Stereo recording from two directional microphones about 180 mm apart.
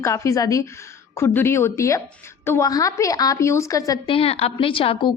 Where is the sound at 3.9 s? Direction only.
30° left (ahead or behind).